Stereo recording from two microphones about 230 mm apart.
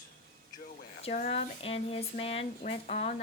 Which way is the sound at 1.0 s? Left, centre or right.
Left.